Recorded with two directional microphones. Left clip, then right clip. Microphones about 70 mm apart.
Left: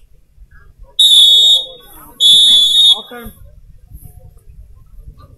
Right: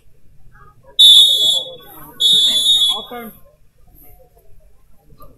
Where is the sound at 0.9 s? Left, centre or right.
Centre.